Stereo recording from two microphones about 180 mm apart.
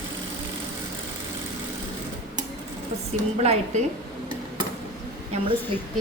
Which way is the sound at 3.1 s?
40° right (ahead or behind).